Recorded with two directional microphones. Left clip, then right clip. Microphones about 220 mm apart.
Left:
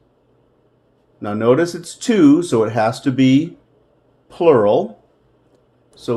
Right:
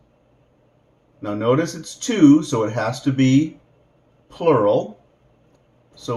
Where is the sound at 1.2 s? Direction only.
40° left (ahead or behind).